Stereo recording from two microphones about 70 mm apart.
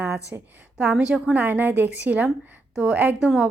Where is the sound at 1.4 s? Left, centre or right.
Right.